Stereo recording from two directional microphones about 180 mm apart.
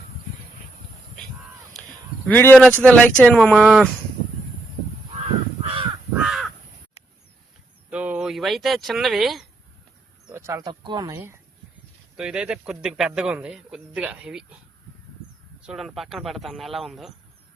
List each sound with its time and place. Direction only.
2.2 s speech: 10° left (ahead or behind)
5.6 s crow: 30° right (ahead or behind)
6.1 s crow: centre (ahead or behind)
7.9 s speech: 10° right (ahead or behind)
10.2 s speech: 15° right (ahead or behind)
12.1 s speech: 5° right (ahead or behind)
15.6 s speech: centre (ahead or behind)